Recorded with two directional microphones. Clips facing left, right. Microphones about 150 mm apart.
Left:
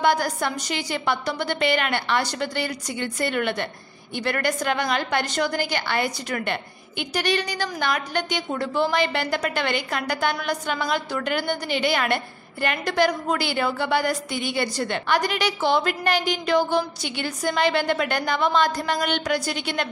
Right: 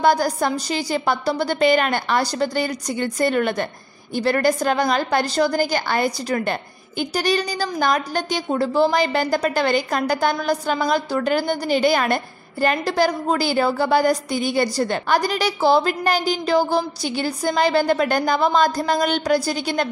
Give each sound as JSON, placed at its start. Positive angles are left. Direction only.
{"t": 0.0, "sound": "a woman's voice", "side_deg": -35}